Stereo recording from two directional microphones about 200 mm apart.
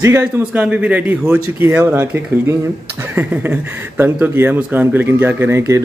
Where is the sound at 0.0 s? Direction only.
10° right (ahead or behind).